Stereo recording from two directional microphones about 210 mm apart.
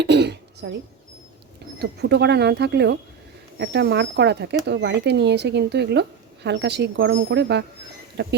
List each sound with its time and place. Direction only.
0.0 s speech: 55° right (ahead or behind)
1.8 s speech: 50° right (ahead or behind)